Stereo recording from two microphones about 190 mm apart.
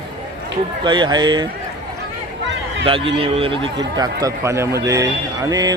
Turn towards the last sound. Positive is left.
turn(degrees=-20)  # may be behind; listen again after turning